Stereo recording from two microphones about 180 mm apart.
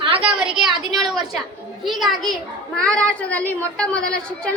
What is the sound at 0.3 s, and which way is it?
A woman's voice, 5° right (ahead or behind).